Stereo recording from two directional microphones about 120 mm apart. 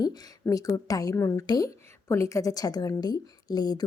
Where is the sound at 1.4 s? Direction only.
35° left (ahead or behind).